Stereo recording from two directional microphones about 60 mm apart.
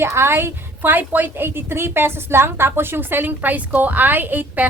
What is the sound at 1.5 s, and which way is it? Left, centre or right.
A woman's voice, right.